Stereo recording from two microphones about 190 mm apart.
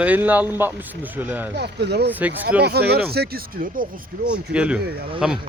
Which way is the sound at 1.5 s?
60° right (ahead or behind).